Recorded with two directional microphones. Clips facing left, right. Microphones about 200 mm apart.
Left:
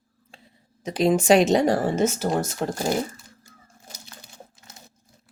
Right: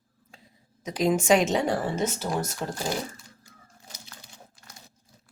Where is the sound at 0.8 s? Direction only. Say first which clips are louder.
Left 4 dB; 30° left (ahead or behind); by 3.0 s 50° left (ahead or behind).